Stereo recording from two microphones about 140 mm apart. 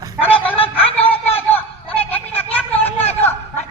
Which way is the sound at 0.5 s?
40° left (ahead or behind).